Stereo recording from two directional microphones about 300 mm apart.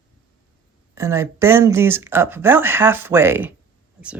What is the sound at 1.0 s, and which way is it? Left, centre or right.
Speech, centre.